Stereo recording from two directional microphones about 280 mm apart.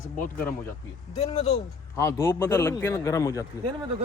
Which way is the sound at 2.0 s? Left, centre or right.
Centre.